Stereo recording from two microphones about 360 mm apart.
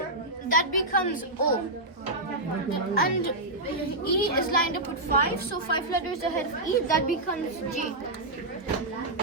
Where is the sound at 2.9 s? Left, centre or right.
Left.